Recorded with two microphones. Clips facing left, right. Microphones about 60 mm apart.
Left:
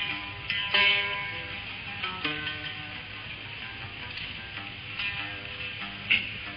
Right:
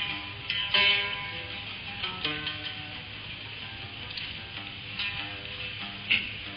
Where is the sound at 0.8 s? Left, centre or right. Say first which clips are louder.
Left 1 dB; centre.